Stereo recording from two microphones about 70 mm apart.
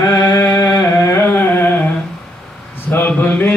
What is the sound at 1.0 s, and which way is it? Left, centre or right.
Carnatic music, left.